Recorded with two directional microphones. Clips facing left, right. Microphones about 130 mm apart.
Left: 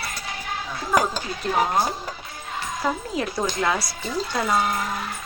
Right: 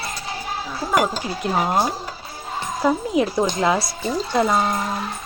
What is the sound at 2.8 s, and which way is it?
A woman's voice, 25° right (ahead or behind).